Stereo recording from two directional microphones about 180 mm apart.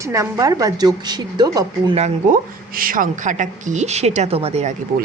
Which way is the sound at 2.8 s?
50° right (ahead or behind).